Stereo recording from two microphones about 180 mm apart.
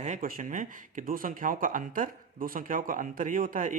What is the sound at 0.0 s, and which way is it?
Speech, 50° right (ahead or behind).